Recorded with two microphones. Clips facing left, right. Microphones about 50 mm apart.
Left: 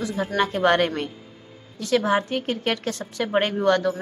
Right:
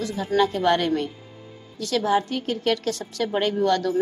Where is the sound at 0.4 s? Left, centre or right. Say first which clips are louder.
Left 1 dB; left.